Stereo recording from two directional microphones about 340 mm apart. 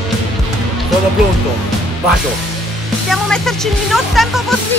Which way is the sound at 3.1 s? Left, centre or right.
Centre.